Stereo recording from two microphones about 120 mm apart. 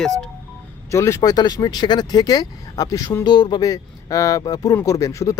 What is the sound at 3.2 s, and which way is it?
Speech, 40° left (ahead or behind).